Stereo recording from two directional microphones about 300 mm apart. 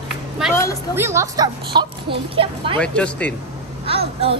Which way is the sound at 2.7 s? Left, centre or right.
Centre.